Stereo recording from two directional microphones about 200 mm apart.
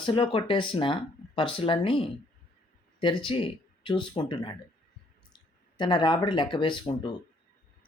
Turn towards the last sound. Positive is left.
turn(degrees=25)  # may be behind; listen again after turning